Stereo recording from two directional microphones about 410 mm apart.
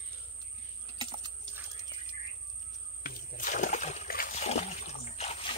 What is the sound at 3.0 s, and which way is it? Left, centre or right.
Splash, left.